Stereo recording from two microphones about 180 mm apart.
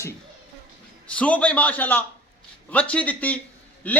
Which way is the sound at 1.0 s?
5° left (ahead or behind).